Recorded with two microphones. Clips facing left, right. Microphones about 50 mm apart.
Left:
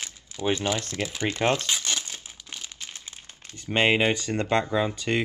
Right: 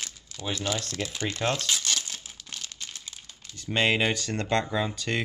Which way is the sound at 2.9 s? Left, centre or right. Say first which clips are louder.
Left 1 dB; left.